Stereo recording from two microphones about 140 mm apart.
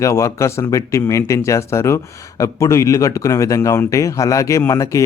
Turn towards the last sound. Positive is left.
turn(degrees=25)  # may be behind; listen again after turning